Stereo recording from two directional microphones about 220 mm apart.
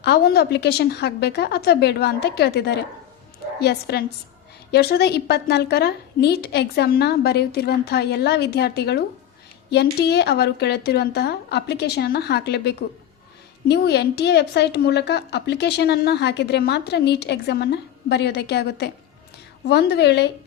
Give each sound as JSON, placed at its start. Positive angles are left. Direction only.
{"t": 0.0, "sound": "a woman's voice", "side_deg": 45}